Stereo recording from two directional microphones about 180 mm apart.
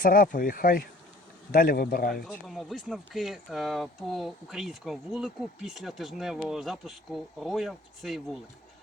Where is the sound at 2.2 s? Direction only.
Centre (ahead or behind).